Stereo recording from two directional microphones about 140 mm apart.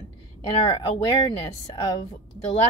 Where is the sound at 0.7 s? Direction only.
35° left (ahead or behind).